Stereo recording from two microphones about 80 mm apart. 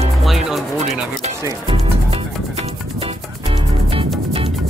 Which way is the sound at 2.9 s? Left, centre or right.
Right.